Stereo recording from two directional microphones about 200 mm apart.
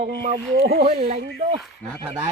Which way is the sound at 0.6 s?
50° right (ahead or behind).